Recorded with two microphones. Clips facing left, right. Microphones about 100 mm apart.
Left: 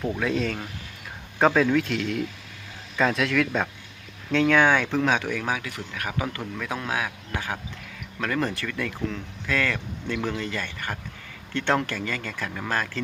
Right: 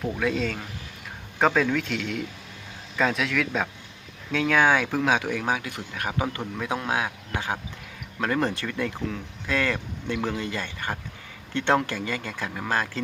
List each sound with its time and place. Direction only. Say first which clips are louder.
0.2 s a man's voice: even; centre (ahead or behind); by 13.0 s 15° right (ahead or behind)